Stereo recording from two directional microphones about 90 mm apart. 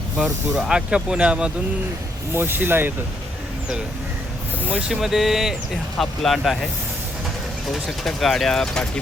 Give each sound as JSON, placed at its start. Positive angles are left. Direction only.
{"t": 0.2, "sound": "speech", "side_deg": -5}
{"t": 2.3, "sound": "speech", "side_deg": -25}
{"t": 4.7, "sound": "speech", "side_deg": -5}
{"t": 7.7, "sound": "speech", "side_deg": 0}